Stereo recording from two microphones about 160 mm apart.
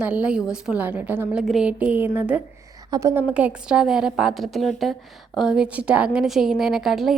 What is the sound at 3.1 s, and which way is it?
A woman's voice, 10° right (ahead or behind).